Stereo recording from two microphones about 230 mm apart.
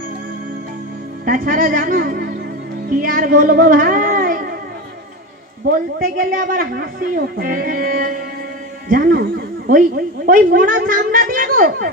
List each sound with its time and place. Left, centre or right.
1.2 s speech: right
5.7 s a woman's voice: right